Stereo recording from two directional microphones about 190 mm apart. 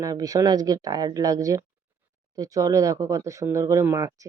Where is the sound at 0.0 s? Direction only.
20° right (ahead or behind).